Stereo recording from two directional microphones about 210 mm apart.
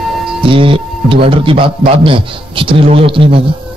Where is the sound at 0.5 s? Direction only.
25° right (ahead or behind).